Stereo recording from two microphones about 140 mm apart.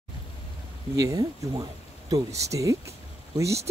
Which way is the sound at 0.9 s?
25° right (ahead or behind).